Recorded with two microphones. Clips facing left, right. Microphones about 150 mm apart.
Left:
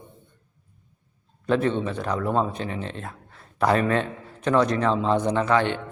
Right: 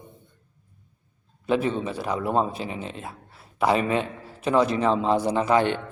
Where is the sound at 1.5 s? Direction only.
5° right (ahead or behind).